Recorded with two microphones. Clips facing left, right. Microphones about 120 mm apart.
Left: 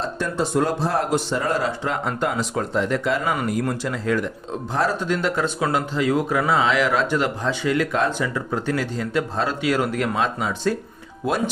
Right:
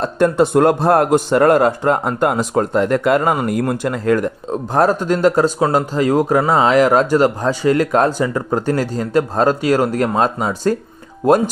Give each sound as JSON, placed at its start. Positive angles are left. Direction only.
{"t": 0.0, "sound": "a man's voice", "side_deg": -55}